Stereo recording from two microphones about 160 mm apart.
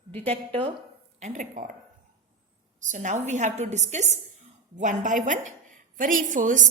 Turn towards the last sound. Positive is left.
turn(degrees=-55)  # may be behind; listen again after turning